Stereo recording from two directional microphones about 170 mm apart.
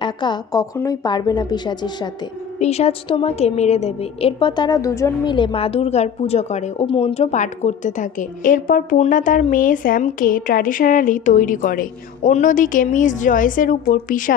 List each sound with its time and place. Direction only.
0.0 s a woman's voice: 25° left (ahead or behind)
2.6 s a woman's voice: 40° left (ahead or behind)